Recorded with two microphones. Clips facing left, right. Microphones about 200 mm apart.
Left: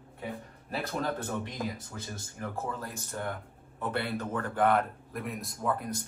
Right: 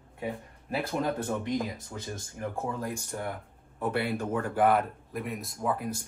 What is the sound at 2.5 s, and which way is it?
Speech, 15° right (ahead or behind).